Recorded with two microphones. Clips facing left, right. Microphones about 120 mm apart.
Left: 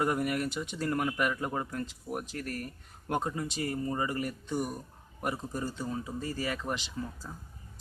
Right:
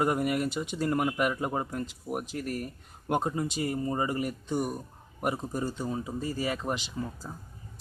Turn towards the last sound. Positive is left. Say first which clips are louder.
# right 3 dB
turn(degrees=-20)  # may be behind; listen again after turning